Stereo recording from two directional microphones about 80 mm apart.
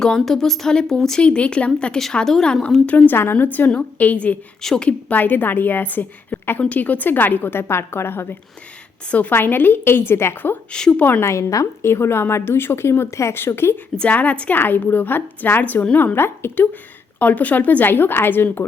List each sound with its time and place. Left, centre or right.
0.0 s a woman's voice: centre
2.8 s a woman's voice: left
9.0 s a woman's voice: centre
10.7 s a woman's voice: centre
11.0 s a woman's voice: left
13.9 s a woman's voice: centre
16.1 s a woman's voice: left